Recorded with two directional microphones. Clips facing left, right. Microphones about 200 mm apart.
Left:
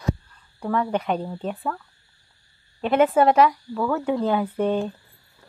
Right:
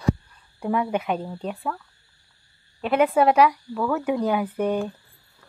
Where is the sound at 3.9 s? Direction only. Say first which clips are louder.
Left 1 dB; 15° right (ahead or behind).